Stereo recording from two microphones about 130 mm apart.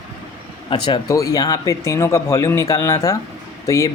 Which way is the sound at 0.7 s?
35° left (ahead or behind).